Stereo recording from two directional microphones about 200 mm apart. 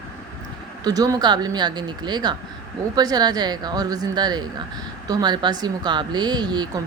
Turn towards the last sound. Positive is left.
turn(degrees=-20)  # may be behind; listen again after turning